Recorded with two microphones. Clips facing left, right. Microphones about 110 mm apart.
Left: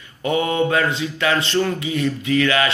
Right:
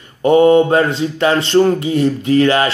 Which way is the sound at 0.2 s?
40° right (ahead or behind).